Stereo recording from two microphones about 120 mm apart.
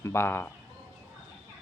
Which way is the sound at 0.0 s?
20° left (ahead or behind).